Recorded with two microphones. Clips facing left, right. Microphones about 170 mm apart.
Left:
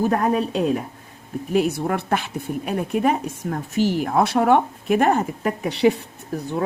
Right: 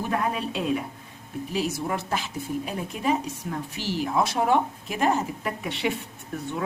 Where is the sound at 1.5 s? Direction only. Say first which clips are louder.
Left 7 dB; 60° left (ahead or behind).